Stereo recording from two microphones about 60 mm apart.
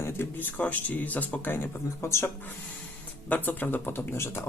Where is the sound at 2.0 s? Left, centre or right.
Left.